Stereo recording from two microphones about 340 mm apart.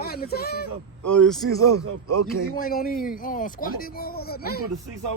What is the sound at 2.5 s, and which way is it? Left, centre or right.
Speech, left.